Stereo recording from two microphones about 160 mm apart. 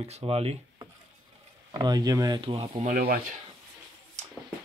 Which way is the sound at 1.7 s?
25° right (ahead or behind).